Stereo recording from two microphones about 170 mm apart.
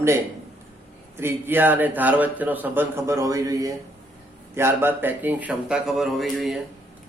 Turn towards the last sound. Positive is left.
turn(degrees=0)  # may be behind; listen again after turning